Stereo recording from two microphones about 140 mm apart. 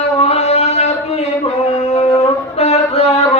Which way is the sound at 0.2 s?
50° left (ahead or behind).